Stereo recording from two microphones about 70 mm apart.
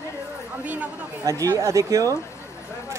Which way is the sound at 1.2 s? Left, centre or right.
Right.